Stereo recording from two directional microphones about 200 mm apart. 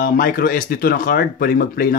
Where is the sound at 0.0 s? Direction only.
45° left (ahead or behind).